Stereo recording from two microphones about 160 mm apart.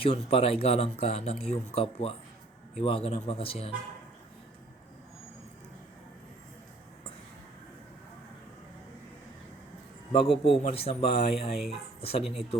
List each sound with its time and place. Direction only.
0.0 s speech: 35° left (ahead or behind)
10.1 s speech: 35° left (ahead or behind)
11.5 s speech: centre (ahead or behind)
11.9 s speech: 40° left (ahead or behind)
12.2 s speech: centre (ahead or behind)